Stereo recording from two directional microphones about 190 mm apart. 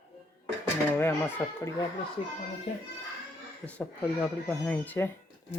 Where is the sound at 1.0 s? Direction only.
15° left (ahead or behind).